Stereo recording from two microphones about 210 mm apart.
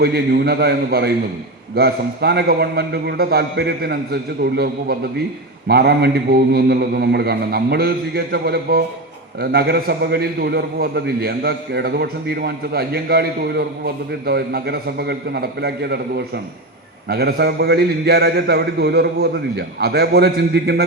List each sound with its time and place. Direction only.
0.0 s a man's voice: 50° right (ahead or behind)